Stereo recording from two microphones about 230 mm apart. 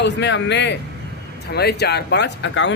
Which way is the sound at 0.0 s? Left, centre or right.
Left.